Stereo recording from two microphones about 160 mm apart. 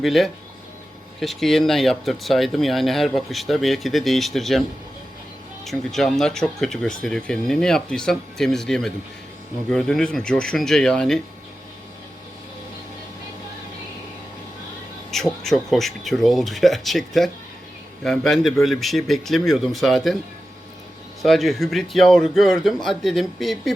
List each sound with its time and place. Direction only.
0.0 s speech: centre (ahead or behind)
5.6 s speech: centre (ahead or behind)
15.1 s speech: centre (ahead or behind)
21.2 s speech: centre (ahead or behind)